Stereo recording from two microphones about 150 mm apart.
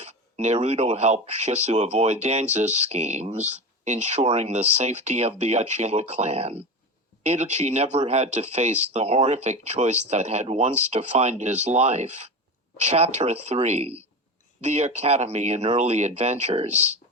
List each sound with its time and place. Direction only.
0.0 s speech: 45° right (ahead or behind)